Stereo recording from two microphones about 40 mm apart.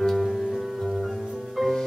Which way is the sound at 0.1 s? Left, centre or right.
Centre.